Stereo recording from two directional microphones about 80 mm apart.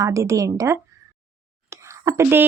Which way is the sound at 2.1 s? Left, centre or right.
Right.